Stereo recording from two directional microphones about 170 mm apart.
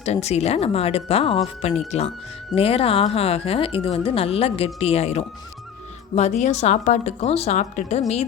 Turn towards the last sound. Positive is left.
turn(degrees=45)  # may be behind; listen again after turning